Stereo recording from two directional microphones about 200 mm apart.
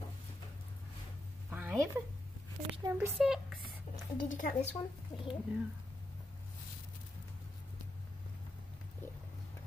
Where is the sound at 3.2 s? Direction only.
Centre (ahead or behind).